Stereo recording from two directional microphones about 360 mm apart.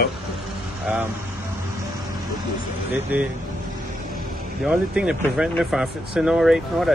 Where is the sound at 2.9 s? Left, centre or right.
Centre.